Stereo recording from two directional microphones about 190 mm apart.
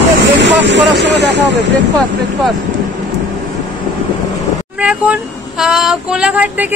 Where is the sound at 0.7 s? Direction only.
70° right (ahead or behind).